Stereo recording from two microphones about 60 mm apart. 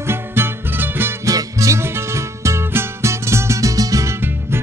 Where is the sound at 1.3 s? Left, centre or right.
Right.